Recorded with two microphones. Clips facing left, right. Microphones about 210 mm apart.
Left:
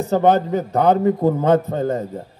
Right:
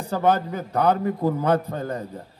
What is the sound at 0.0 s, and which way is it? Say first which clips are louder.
A man's voice: left 6 dB; 25° left (ahead or behind).